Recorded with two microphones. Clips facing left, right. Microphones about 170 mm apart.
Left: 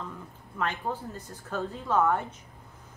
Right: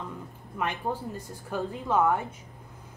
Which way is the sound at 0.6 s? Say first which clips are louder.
Right 1 dB; 15° right (ahead or behind).